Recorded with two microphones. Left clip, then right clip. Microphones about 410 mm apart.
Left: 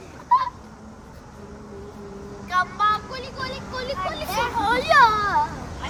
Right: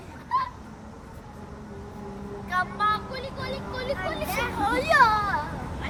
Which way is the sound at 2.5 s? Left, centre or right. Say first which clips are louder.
Left 4 dB; centre.